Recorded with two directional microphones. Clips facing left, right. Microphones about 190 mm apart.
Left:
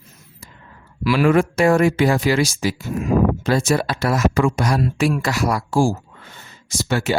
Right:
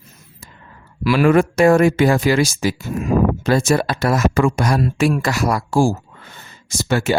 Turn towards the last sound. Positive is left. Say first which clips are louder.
# right 2 dB
turn(degrees=-50)  # may be behind; listen again after turning